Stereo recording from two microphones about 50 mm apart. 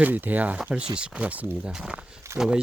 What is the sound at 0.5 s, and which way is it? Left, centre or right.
Speech, right.